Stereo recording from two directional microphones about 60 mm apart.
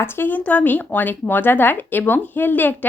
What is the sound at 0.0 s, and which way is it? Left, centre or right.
A woman's voice, left.